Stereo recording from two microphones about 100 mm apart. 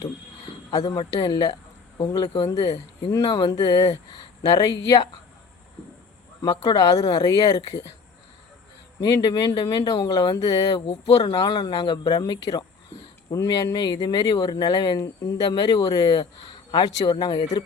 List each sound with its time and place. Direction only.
0.8 s speech: 55° left (ahead or behind)
1.2 s speech: 45° left (ahead or behind)
2.5 s speech: 35° left (ahead or behind)
3.2 s speech: 45° left (ahead or behind)
6.4 s speech: 35° left (ahead or behind)
9.2 s speech: 45° left (ahead or behind)
11.3 s speech: 50° left (ahead or behind)